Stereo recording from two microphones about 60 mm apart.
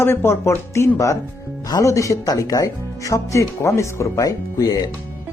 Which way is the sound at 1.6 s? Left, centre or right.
Left.